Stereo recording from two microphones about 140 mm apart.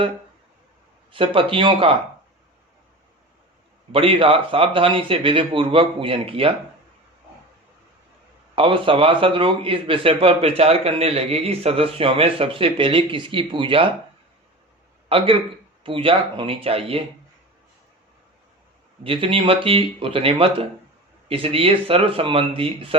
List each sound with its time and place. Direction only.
1.1 s speech: 40° right (ahead or behind)
3.9 s speech: 40° right (ahead or behind)
8.5 s speech: 40° right (ahead or behind)
15.1 s speech: 40° right (ahead or behind)
19.0 s speech: 40° right (ahead or behind)